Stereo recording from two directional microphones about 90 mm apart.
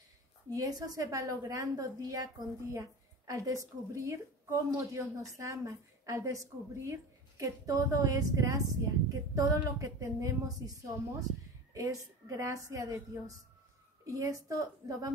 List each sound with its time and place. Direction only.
0.5 s a woman's voice: 45° right (ahead or behind)